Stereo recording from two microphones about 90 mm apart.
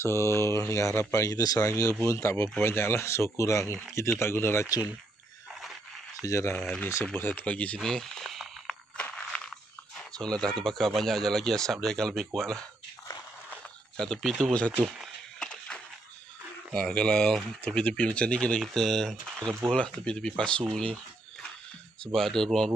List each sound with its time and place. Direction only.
0.0 s speech: 30° left (ahead or behind)
6.2 s speech: 35° left (ahead or behind)
7.2 s speech: 20° left (ahead or behind); by 8.7 s centre (ahead or behind)
8.9 s a sound: 10° left (ahead or behind)
10.6 s speech: 5° left (ahead or behind)
13.9 s speech: 5° left (ahead or behind)
14.8 s speech: 15° right (ahead or behind)
15.3 s a sound: 10° left (ahead or behind)
16.7 s speech: 5° left (ahead or behind)
18.6 s speech: centre (ahead or behind)
20.7 s a sound: 10° left (ahead or behind)
22.0 s speech: 5° left (ahead or behind)